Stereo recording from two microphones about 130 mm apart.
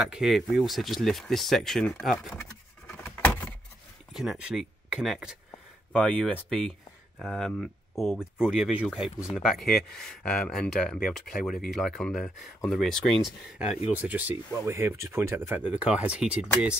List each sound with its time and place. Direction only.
0.0 s speech: 5° right (ahead or behind)
2.9 s a sound: 15° left (ahead or behind)
4.1 s speech: 5° right (ahead or behind)
11.0 s speech: 90° left
11.7 s speech: centre (ahead or behind)
13.9 s speech: 10° right (ahead or behind)